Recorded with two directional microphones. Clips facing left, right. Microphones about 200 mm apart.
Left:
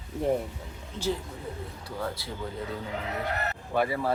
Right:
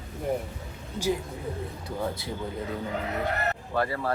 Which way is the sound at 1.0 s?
15° right (ahead or behind).